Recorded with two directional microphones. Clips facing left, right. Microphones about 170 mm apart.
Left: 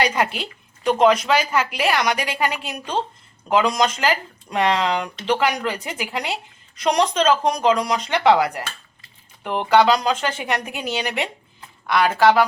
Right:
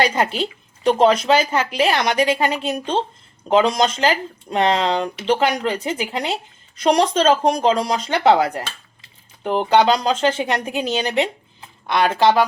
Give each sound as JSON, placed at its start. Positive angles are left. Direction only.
{"t": 0.0, "sound": "speech", "side_deg": -30}